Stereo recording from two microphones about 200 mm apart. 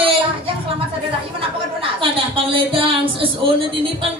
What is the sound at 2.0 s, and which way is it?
A woman's voice, 25° right (ahead or behind).